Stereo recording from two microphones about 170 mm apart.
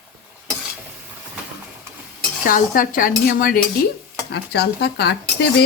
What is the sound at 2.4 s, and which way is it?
Dishes, 55° left (ahead or behind).